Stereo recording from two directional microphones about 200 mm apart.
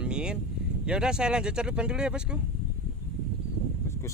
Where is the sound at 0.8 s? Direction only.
5° right (ahead or behind).